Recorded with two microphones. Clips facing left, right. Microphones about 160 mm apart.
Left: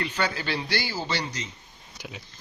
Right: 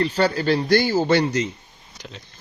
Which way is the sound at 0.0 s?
40° right (ahead or behind).